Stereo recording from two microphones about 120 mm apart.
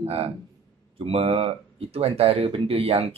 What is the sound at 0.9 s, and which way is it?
Speech, 55° right (ahead or behind).